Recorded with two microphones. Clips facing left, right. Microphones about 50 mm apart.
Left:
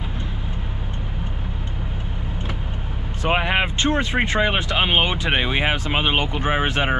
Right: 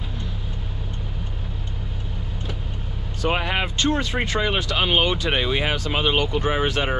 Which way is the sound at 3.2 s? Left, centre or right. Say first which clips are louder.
Left 3 dB; left.